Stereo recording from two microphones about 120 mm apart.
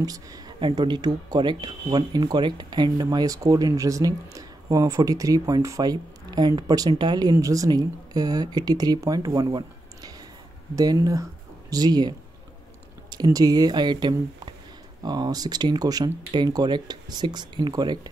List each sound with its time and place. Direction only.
0.0 s speech: 30° right (ahead or behind)
13.1 s speech: 30° right (ahead or behind)